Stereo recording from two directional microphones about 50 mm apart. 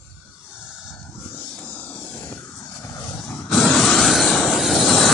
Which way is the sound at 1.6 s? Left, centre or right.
Left.